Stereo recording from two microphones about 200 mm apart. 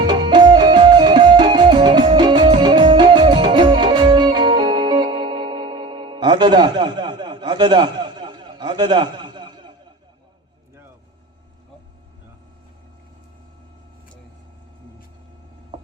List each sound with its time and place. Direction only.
0.0 s music: 20° right (ahead or behind)